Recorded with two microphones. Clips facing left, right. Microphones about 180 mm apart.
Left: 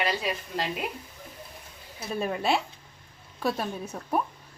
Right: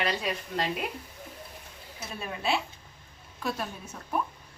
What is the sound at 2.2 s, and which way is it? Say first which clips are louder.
A woman's voice: left 4 dB; 40° left (ahead or behind).